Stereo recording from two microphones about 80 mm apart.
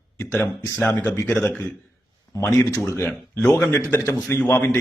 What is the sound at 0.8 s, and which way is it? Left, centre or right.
Speech, left.